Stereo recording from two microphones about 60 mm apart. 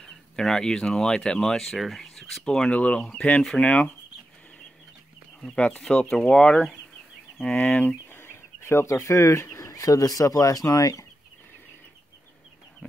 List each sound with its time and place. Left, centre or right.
0.0 s speech: centre
5.6 s speech: centre
7.4 s speech: left
8.2 s speech: left